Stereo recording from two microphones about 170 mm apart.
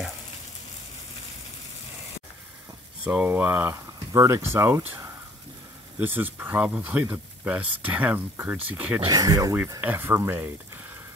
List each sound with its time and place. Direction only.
3.0 s speech: 10° right (ahead or behind)
5.9 s speech: 10° right (ahead or behind)
9.0 s speech: 20° right (ahead or behind)